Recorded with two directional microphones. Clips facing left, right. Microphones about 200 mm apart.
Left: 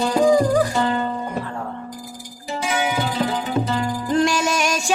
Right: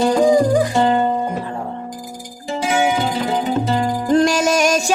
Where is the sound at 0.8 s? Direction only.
25° right (ahead or behind).